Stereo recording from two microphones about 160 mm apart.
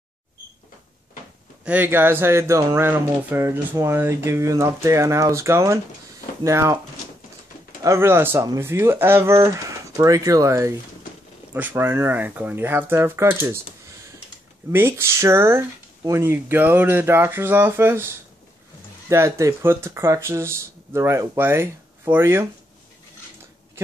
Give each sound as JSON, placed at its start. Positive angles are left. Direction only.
{"t": 1.6, "sound": "speech", "side_deg": -10}
{"t": 7.8, "sound": "speech", "side_deg": -15}
{"t": 14.7, "sound": "speech", "side_deg": -15}